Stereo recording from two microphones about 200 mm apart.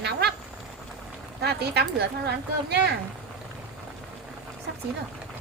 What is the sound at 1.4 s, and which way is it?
Female singing, 55° right (ahead or behind).